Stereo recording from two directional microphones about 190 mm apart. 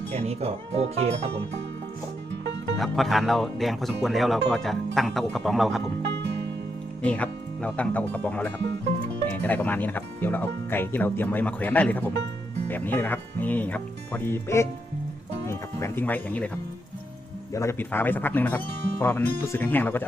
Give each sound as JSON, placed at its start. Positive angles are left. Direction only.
{"t": 0.1, "sound": "speech", "side_deg": -35}
{"t": 2.7, "sound": "speech", "side_deg": 0}
{"t": 7.0, "sound": "speech", "side_deg": 5}
{"t": 17.5, "sound": "speech", "side_deg": 15}